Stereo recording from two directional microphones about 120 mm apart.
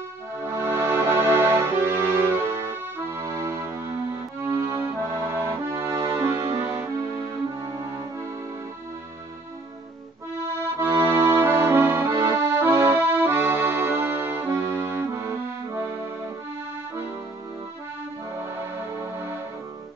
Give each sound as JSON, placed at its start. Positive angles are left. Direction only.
{"t": 0.5, "sound": "music", "side_deg": -20}
{"t": 4.5, "sound": "accordion", "side_deg": -20}
{"t": 6.2, "sound": "music", "side_deg": -20}
{"t": 10.8, "sound": "accordion", "side_deg": -25}